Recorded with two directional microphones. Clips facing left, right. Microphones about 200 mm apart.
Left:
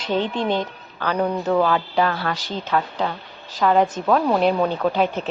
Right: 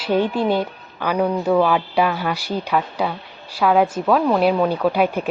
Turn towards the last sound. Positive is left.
turn(degrees=-10)  # may be behind; listen again after turning